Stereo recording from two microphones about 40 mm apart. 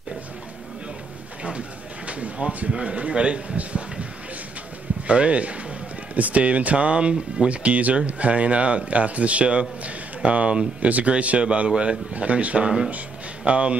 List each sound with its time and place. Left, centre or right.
2.0 s a sound: right
2.7 s a man's voice: right
12.6 s speech: right